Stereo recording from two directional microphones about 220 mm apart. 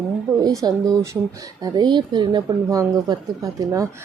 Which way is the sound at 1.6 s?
20° right (ahead or behind).